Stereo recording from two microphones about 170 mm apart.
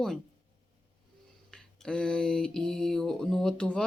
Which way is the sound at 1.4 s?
5° left (ahead or behind).